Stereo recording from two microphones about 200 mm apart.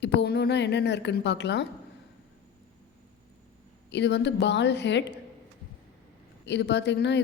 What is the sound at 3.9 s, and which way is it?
Speech, 60° left (ahead or behind).